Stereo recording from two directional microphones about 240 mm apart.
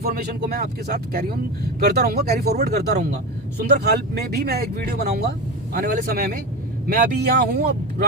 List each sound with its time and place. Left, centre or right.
0.0 s speech: right